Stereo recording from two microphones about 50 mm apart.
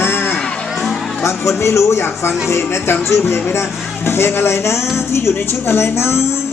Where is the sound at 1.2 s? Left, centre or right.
Left.